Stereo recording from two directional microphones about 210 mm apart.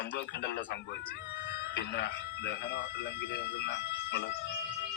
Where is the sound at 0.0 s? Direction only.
55° left (ahead or behind).